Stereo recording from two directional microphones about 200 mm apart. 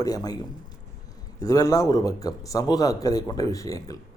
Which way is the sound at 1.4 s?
15° left (ahead or behind).